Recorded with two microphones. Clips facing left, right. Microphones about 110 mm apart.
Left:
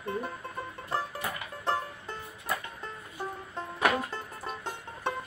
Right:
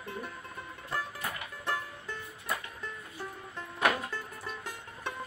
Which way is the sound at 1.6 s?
35° left (ahead or behind).